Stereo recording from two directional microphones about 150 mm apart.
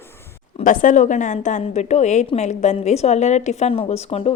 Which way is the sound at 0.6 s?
60° left (ahead or behind).